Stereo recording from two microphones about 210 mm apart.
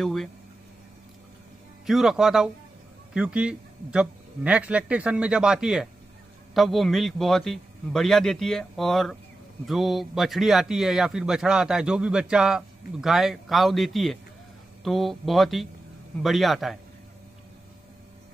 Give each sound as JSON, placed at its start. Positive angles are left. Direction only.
{"t": 0.0, "sound": "speech", "side_deg": 0}
{"t": 1.9, "sound": "speech", "side_deg": 0}